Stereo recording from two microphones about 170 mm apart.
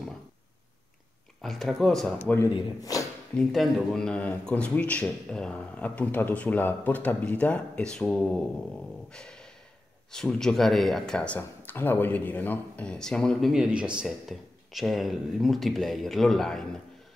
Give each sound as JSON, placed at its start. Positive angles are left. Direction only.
{"t": 1.4, "sound": "speech", "side_deg": 0}
{"t": 2.1, "sound": "speech", "side_deg": 15}
{"t": 3.3, "sound": "speech", "side_deg": 0}
{"t": 9.1, "sound": "a sound", "side_deg": 5}
{"t": 10.1, "sound": "speech", "side_deg": 5}